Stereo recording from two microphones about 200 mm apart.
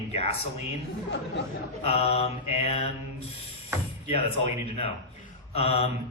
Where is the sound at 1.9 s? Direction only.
30° left (ahead or behind).